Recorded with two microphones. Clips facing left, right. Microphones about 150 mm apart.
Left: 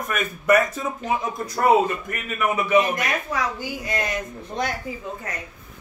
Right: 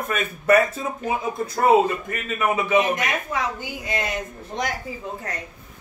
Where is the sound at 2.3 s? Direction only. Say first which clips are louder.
Left 1 dB; 25° right (ahead or behind).